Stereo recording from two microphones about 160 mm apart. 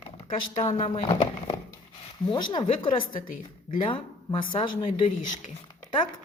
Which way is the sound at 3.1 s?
60° left (ahead or behind).